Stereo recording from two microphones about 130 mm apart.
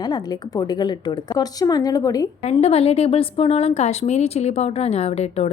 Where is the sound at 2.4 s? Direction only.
55° left (ahead or behind).